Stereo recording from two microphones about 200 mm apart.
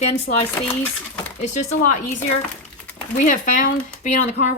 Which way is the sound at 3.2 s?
40° left (ahead or behind).